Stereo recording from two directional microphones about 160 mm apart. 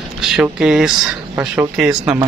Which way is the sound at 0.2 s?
5° right (ahead or behind).